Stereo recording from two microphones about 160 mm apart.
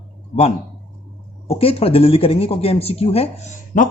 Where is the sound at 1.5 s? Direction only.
35° left (ahead or behind).